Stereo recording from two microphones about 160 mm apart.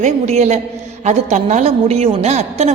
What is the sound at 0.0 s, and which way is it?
A man's voice, 45° right (ahead or behind).